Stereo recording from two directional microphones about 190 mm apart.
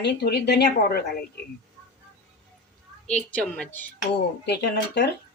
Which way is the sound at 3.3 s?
5° left (ahead or behind).